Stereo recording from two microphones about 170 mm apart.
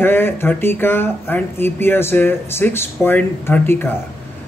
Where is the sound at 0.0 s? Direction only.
15° left (ahead or behind).